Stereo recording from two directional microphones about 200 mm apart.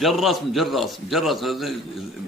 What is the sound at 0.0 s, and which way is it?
Speech, centre (ahead or behind).